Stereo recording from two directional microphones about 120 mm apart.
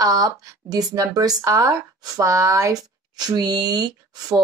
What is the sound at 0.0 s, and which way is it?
Speech, 30° right (ahead or behind).